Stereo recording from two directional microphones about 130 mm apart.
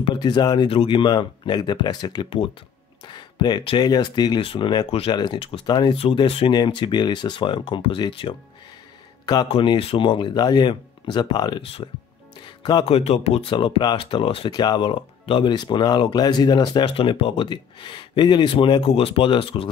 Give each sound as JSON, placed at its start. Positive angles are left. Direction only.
{"t": 0.0, "sound": "speech", "side_deg": 35}
{"t": 5.9, "sound": "speech", "side_deg": 45}
{"t": 11.6, "sound": "speech", "side_deg": 45}
{"t": 12.4, "sound": "music", "side_deg": 35}
{"t": 12.8, "sound": "speech", "side_deg": 50}
{"t": 14.5, "sound": "speech", "side_deg": 35}